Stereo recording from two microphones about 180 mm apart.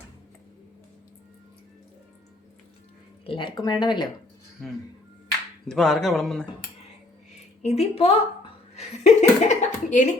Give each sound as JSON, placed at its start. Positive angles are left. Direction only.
{"t": 3.2, "sound": "speech", "side_deg": 25}
{"t": 5.6, "sound": "speech", "side_deg": 5}
{"t": 7.6, "sound": "a woman's voice", "side_deg": 35}